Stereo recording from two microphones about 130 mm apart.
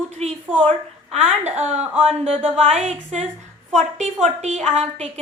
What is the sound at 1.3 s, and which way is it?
A woman's voice, 55° right (ahead or behind).